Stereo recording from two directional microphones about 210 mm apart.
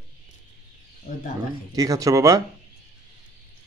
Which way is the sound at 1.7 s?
15° right (ahead or behind).